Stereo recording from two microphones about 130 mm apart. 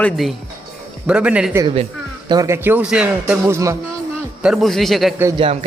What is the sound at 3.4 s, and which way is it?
Speech, 20° right (ahead or behind).